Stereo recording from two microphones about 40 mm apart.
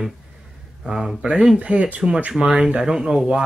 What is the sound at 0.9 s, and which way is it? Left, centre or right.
Speech, centre.